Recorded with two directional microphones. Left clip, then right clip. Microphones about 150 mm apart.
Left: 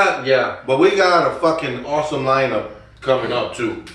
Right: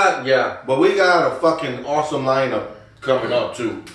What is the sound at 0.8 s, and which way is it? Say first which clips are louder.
Speech: left 1 dB; 15° right (ahead or behind).